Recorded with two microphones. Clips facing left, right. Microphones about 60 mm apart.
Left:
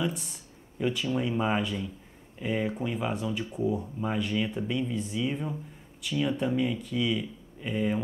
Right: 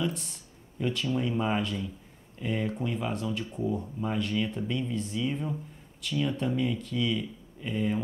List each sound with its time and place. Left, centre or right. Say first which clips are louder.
0.0 s speech: even; centre